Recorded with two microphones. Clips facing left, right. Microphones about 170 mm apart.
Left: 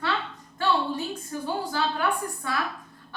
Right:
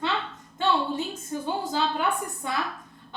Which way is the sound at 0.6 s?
20° right (ahead or behind).